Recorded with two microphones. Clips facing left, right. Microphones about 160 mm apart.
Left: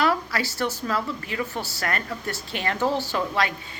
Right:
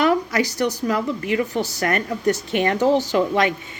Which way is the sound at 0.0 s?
20° right (ahead or behind).